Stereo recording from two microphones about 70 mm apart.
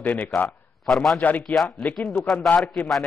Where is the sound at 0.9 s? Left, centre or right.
Centre.